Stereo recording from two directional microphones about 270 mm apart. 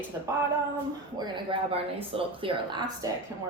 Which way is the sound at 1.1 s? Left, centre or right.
Centre.